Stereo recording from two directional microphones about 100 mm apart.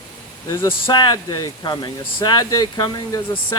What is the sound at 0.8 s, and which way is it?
Speech, 50° left (ahead or behind).